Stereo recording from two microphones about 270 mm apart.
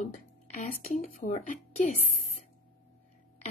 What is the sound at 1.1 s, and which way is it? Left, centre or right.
Speech, left.